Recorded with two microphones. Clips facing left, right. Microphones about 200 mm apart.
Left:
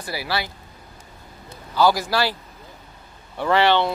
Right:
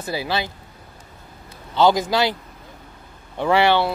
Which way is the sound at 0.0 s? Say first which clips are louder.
Right 3 dB; 20° right (ahead or behind).